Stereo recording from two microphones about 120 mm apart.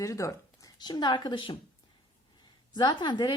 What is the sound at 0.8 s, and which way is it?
Speech, 35° left (ahead or behind).